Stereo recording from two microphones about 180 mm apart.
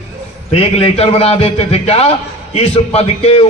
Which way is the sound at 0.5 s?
30° left (ahead or behind).